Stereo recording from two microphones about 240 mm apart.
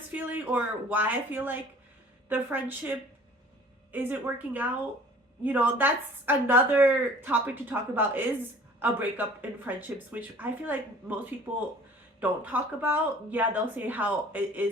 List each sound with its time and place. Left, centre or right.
0.1 s speech: centre
3.9 s speech: centre
12.2 s speech: centre